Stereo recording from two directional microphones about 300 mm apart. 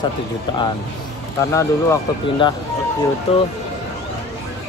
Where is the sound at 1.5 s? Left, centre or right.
Centre.